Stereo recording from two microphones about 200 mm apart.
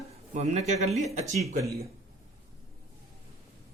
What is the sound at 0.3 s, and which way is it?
Speech, 35° right (ahead or behind).